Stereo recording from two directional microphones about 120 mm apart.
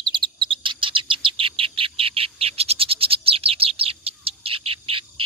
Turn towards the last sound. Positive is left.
turn(degrees=-50)  # may be behind; listen again after turning